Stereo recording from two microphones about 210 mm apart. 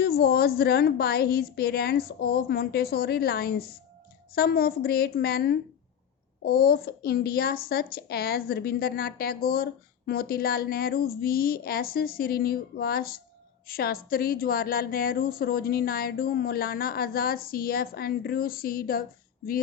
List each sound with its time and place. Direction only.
0.0 s a woman's voice: 50° left (ahead or behind)